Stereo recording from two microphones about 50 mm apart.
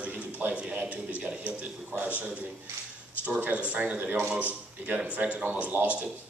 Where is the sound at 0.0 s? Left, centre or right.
Right.